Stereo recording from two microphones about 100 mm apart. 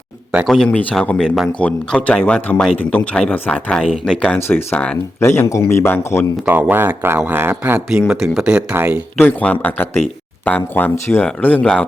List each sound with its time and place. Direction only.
0.4 s speech: 5° left (ahead or behind)
4.4 s a man's voice: 20° left (ahead or behind)
6.4 s speech: 15° right (ahead or behind)
7.9 s speech: 5° right (ahead or behind)
8.7 s speech: 25° right (ahead or behind)
9.1 s a man's voice: 15° left (ahead or behind)